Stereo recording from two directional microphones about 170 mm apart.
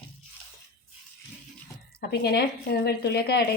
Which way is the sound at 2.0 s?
70° left (ahead or behind).